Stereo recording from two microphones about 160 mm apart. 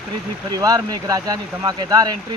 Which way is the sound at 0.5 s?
25° right (ahead or behind).